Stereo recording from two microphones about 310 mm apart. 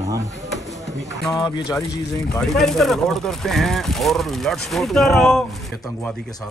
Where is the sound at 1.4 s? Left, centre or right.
Centre.